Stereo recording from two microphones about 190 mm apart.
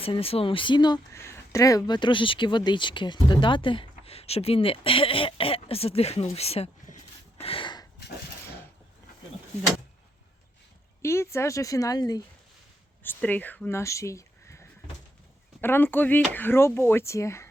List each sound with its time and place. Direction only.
0.0 s speech: 30° left (ahead or behind)
11.0 s speech: 15° left (ahead or behind)
13.0 s speech: 10° left (ahead or behind)